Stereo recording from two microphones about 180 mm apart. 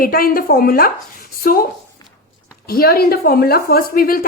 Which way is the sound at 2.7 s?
55° left (ahead or behind).